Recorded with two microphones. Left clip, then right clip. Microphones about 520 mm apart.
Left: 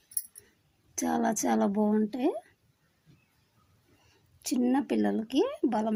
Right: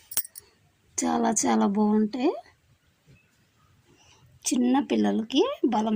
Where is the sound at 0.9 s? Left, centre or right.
Left.